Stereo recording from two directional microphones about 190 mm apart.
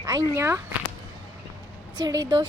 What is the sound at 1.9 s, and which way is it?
Speech, 20° right (ahead or behind).